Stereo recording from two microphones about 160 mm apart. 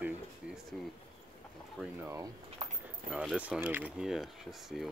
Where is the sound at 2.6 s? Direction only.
45° right (ahead or behind).